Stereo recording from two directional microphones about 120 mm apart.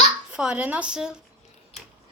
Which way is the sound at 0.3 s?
5° right (ahead or behind).